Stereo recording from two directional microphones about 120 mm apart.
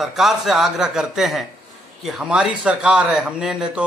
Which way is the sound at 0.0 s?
5° right (ahead or behind).